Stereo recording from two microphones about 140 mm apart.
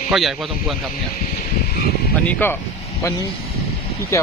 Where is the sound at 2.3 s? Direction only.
15° left (ahead or behind).